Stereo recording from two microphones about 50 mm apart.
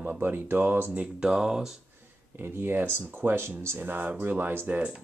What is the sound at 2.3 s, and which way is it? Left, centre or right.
Speech, right.